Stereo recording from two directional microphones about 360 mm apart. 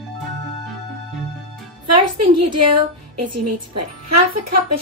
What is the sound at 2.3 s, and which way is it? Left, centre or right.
Speech, right.